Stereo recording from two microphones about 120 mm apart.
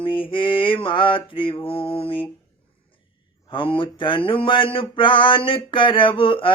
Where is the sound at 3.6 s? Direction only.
45° left (ahead or behind).